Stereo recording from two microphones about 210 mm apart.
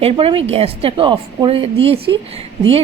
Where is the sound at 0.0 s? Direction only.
25° right (ahead or behind).